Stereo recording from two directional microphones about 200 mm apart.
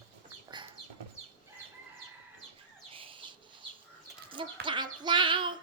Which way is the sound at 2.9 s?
25° right (ahead or behind).